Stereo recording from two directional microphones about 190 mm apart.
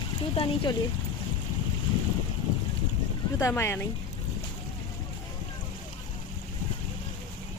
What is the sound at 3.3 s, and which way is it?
Speech, 15° left (ahead or behind).